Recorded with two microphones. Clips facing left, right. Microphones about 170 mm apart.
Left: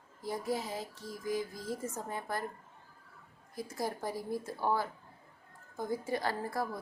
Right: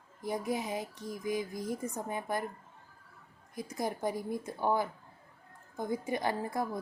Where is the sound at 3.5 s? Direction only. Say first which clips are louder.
Right 1 dB; 15° right (ahead or behind).